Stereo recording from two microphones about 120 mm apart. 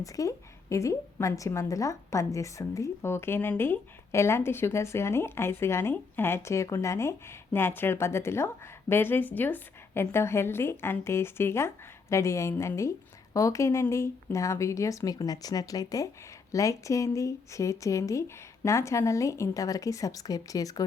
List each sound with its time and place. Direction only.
0.0 s a woman's voice: 25° left (ahead or behind)